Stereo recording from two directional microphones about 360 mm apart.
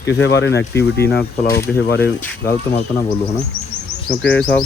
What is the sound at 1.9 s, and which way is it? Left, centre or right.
Speech, left.